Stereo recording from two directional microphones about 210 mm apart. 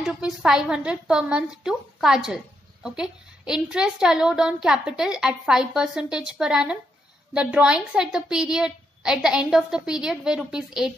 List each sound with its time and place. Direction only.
0.0 s a woman's voice: 5° right (ahead or behind)